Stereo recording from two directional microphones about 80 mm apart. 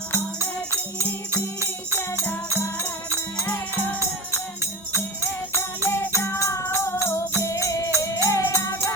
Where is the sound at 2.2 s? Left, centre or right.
Left.